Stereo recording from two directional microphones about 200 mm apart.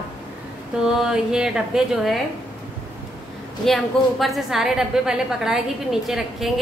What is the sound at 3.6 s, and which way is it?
A woman's voice, centre (ahead or behind).